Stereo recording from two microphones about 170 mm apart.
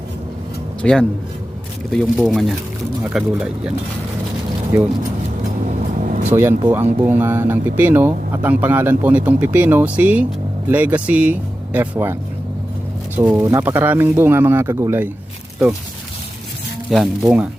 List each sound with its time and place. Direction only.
0.8 s speech: 5° left (ahead or behind)
5.6 s vehicle: 45° right (ahead or behind)
6.3 s speech: 15° right (ahead or behind)
13.1 s speech: 10° right (ahead or behind)
16.9 s speech: centre (ahead or behind)